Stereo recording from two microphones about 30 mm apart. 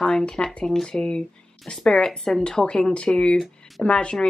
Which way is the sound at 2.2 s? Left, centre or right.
Centre.